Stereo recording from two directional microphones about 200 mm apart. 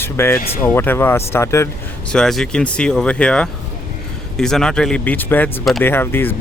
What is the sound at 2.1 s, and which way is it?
Speech, centre (ahead or behind).